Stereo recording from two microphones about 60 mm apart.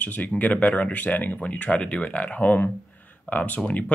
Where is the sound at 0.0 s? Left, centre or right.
Left.